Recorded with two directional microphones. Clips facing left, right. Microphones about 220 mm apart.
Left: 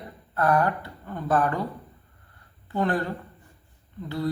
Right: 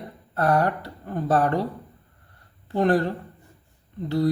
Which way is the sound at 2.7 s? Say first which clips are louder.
Right 5 dB; 35° right (ahead or behind).